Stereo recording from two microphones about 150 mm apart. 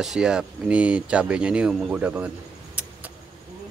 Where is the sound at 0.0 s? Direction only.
5° right (ahead or behind).